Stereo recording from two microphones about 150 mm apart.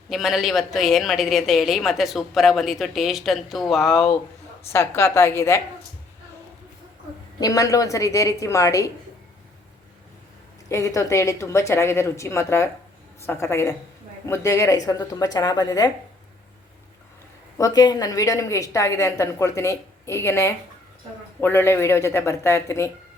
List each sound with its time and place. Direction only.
0.1 s a woman's voice: centre (ahead or behind)
4.7 s speech: 15° left (ahead or behind)
7.3 s a woman's voice: 25° left (ahead or behind)
10.7 s a woman's voice: 20° left (ahead or behind)
17.6 s a woman's voice: 25° left (ahead or behind)